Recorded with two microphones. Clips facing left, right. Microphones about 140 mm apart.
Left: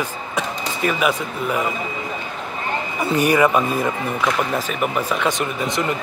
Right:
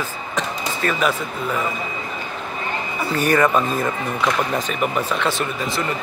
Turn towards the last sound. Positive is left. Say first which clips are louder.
# left 1 dB
turn(degrees=20)  # may be behind; listen again after turning